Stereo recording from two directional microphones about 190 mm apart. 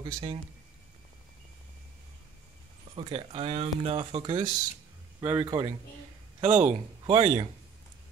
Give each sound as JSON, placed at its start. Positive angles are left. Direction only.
{"t": 0.0, "sound": "speech", "side_deg": -25}
{"t": 3.0, "sound": "speech", "side_deg": -30}
{"t": 6.4, "sound": "speech", "side_deg": -35}